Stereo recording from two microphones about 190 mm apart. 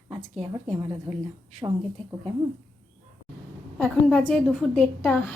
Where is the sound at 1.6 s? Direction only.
20° right (ahead or behind).